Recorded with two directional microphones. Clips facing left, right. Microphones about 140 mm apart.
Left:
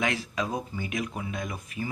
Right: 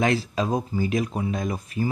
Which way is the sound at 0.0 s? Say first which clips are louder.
Right 6 dB; 35° right (ahead or behind).